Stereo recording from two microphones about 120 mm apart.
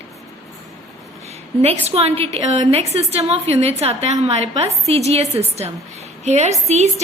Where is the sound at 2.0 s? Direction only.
55° right (ahead or behind).